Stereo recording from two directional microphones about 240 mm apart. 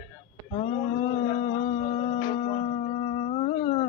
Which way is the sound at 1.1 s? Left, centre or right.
Left.